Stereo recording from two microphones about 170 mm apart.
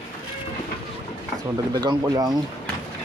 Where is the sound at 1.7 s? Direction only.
20° right (ahead or behind).